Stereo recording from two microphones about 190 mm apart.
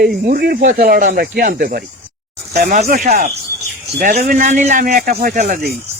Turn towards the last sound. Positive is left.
turn(degrees=-50)  # may be behind; listen again after turning